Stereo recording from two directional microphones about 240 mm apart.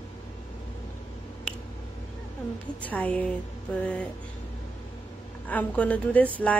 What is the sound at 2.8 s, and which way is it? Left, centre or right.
Speech, centre.